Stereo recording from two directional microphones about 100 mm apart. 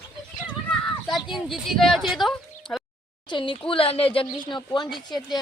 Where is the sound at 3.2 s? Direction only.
55° left (ahead or behind).